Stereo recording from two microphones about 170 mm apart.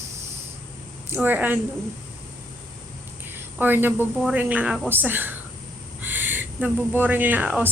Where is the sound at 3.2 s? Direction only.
10° right (ahead or behind).